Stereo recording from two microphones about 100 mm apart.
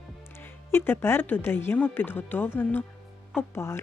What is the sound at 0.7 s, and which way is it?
Speech, 25° left (ahead or behind).